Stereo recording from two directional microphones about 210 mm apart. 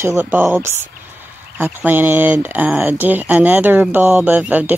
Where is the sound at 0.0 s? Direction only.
10° right (ahead or behind).